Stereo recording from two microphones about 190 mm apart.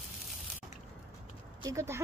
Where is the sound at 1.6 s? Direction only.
15° right (ahead or behind).